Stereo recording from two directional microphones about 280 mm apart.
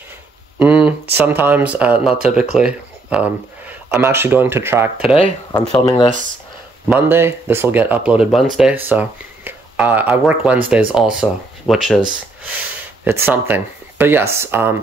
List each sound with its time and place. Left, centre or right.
0.6 s a sound: centre
1.1 s speech: centre
5.1 s speech: centre
6.9 s speech: centre
13.0 s speech: centre